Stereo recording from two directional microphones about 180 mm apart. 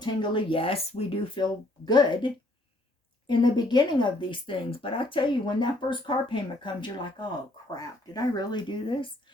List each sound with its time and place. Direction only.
0.0 s a woman's voice: 25° left (ahead or behind)